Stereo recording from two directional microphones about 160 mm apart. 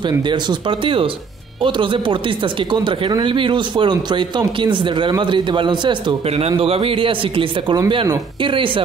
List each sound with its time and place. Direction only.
0.0 s speech: 30° right (ahead or behind)